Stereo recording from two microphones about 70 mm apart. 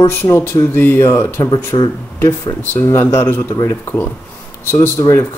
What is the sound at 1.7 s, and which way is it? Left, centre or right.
Speech, left.